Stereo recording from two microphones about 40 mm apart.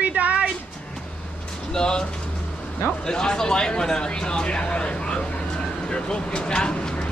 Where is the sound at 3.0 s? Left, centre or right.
Centre.